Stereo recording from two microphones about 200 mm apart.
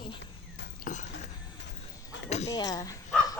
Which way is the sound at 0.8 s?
40° left (ahead or behind).